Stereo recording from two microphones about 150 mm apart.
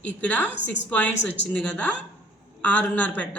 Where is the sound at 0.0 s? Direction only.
10° left (ahead or behind).